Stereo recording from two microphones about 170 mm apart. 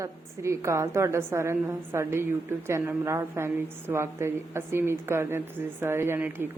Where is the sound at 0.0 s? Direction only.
15° right (ahead or behind).